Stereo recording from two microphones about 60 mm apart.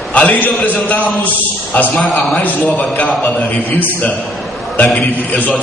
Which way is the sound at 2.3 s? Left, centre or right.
Left.